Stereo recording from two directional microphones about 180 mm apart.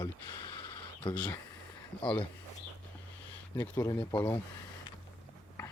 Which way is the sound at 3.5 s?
10° left (ahead or behind).